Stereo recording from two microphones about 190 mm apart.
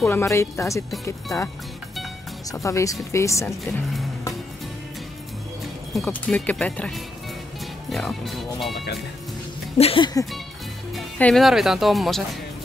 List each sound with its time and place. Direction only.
0.0 s speech: 10° left (ahead or behind)
2.5 s speech: 15° left (ahead or behind)
5.9 s speech: 5° left (ahead or behind)
9.8 s speech: 30° left (ahead or behind)
11.0 s speech: 5° left (ahead or behind)